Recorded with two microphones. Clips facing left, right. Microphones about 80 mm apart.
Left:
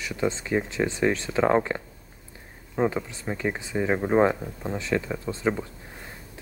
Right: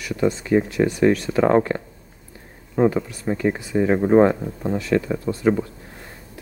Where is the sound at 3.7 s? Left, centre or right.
Centre.